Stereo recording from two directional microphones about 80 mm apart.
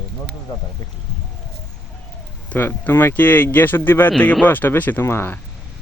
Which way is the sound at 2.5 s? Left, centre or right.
Left.